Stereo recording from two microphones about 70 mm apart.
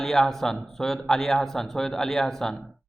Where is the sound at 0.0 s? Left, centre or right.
Centre.